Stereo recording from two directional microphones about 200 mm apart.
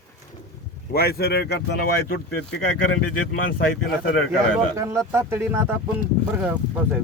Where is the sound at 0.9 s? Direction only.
50° left (ahead or behind).